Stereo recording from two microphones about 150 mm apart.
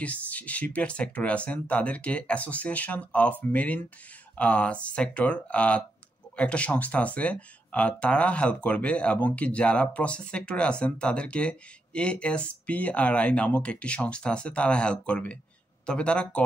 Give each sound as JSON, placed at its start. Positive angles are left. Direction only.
{"t": 0.0, "sound": "speech", "side_deg": 10}